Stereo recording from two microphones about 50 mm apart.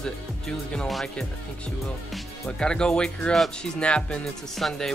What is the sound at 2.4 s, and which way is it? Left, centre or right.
Speech, centre.